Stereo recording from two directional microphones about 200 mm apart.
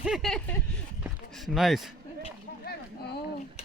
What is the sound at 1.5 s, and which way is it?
Speech, centre (ahead or behind).